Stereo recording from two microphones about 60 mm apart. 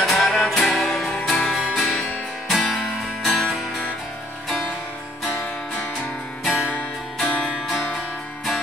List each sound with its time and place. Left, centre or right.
0.0 s music: centre
6.5 s music: left
7.2 s music: centre